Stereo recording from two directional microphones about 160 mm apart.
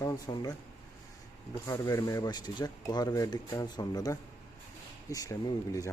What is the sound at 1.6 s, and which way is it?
Speech, 20° left (ahead or behind).